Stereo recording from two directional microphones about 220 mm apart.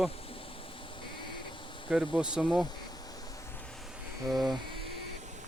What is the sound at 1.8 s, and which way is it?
Speech, centre (ahead or behind).